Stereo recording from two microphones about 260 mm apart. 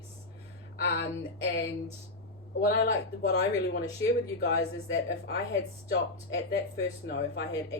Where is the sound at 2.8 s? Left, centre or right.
Left.